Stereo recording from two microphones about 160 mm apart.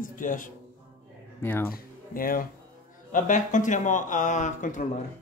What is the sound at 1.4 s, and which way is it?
Speech, 15° left (ahead or behind).